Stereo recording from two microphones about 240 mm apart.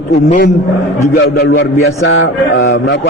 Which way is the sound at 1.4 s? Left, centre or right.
Left.